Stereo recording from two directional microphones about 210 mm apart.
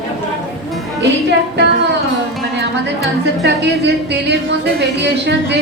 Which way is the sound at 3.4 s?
55° right (ahead or behind).